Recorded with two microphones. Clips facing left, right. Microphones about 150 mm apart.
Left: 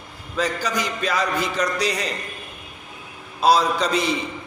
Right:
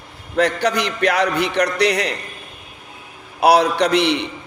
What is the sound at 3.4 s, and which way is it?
Speech, 70° right (ahead or behind).